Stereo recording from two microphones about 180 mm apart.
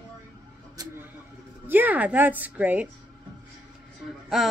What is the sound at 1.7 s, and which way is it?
Speech, 10° right (ahead or behind).